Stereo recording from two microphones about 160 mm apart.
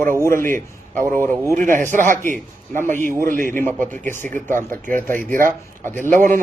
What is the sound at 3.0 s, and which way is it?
Speech, 60° right (ahead or behind).